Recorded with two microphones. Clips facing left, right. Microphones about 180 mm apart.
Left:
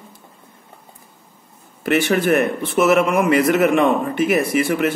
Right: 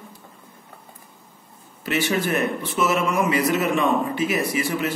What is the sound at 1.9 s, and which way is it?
A man's voice, 55° left (ahead or behind).